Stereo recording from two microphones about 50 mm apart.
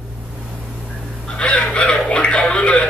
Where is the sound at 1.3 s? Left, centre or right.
Left.